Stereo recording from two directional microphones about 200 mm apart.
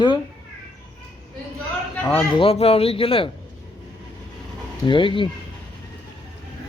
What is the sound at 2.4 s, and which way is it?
Speech, 30° left (ahead or behind).